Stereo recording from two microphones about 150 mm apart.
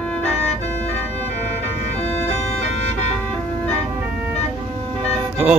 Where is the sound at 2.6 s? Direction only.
45° left (ahead or behind).